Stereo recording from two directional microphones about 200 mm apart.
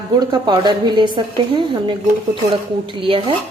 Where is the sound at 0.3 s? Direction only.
20° right (ahead or behind).